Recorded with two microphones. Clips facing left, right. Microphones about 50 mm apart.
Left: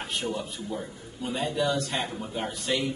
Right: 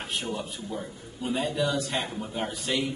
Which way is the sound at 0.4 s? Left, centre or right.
Centre.